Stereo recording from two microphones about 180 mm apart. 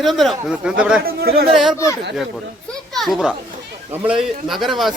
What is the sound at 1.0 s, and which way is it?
Speech, 60° right (ahead or behind).